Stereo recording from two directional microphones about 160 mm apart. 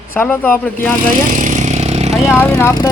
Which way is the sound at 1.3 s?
50° right (ahead or behind).